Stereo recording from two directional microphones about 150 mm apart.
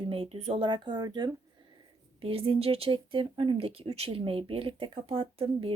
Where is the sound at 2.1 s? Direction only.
40° right (ahead or behind).